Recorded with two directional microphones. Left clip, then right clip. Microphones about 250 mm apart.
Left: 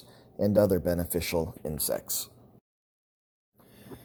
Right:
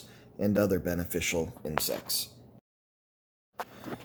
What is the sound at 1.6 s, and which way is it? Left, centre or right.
Speech, left.